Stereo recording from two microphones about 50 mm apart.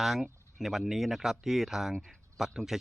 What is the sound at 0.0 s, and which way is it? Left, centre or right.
Speech, centre.